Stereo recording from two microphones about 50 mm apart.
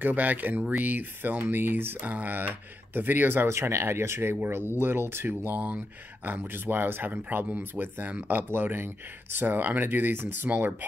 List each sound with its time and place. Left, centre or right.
0.0 s speech: right
4.7 s speech: right
5.5 s speech: right
6.2 s speech: right
8.5 s speech: right